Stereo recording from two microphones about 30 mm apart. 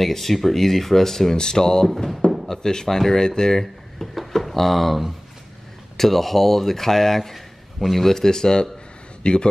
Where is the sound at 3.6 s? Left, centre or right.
Centre.